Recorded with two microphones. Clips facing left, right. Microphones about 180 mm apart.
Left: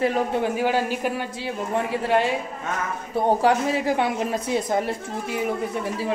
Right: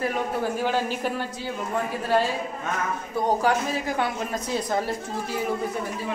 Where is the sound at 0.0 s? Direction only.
25° left (ahead or behind).